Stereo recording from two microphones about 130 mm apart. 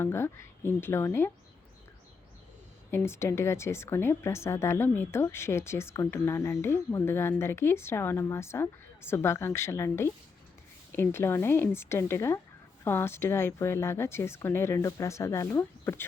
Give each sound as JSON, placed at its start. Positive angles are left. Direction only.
{"t": 0.0, "sound": "a woman's voice", "side_deg": 20}
{"t": 2.9, "sound": "a woman's voice", "side_deg": 20}